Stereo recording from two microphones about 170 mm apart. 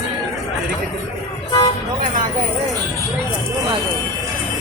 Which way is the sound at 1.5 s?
25° left (ahead or behind).